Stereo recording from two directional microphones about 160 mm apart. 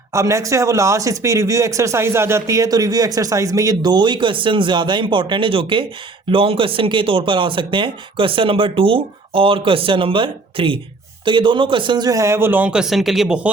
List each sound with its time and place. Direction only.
0.1 s speech: 20° right (ahead or behind)